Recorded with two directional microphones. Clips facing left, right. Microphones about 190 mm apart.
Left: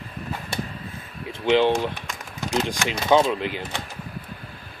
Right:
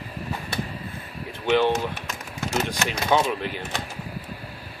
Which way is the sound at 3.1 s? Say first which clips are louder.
Left 4 dB; 20° left (ahead or behind).